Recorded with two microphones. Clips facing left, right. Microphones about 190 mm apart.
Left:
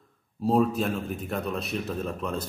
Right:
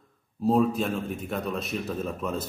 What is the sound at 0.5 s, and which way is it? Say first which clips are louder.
A man's voice: even; centre (ahead or behind).